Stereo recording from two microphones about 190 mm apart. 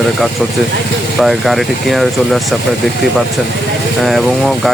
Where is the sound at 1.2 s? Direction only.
Centre (ahead or behind).